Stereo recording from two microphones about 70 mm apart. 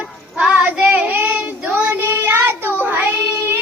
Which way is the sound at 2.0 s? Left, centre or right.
Right.